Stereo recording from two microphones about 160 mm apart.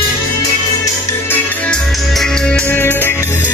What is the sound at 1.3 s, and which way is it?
Music, 5° left (ahead or behind).